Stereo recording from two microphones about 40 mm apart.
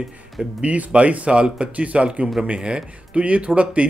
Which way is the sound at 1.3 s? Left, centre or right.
Right.